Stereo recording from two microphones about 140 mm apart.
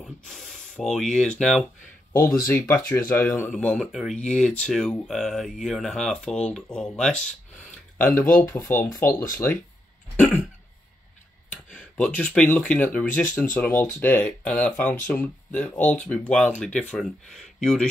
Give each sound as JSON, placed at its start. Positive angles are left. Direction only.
{"t": 0.0, "sound": "spray", "side_deg": 0}
{"t": 2.4, "sound": "speech", "side_deg": 15}
{"t": 8.1, "sound": "speech", "side_deg": 20}
{"t": 10.1, "sound": "throat clearing", "side_deg": 10}
{"t": 11.7, "sound": "speech", "side_deg": 10}